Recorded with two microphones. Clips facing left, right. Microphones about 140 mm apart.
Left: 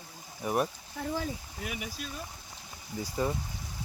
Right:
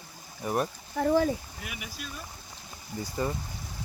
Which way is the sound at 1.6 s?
35° left (ahead or behind).